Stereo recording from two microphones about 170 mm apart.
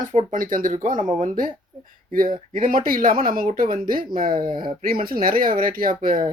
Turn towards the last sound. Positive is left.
turn(degrees=-55)  # may be behind; listen again after turning